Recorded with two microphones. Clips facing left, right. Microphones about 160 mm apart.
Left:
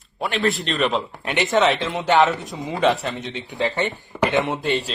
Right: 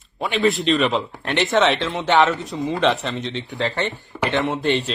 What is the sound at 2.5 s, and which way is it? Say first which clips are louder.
Speech: right 5 dB; 20° left (ahead or behind).